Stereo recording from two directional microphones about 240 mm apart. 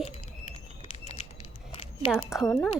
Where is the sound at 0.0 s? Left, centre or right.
Left.